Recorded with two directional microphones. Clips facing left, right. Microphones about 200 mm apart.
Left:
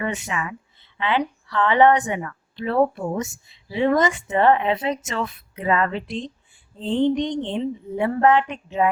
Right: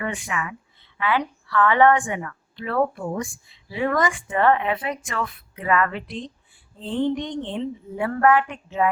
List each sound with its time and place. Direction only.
0.0 s a woman's voice: 25° left (ahead or behind)